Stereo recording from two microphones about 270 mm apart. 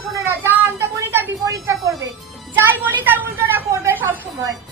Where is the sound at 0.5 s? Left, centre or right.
Centre.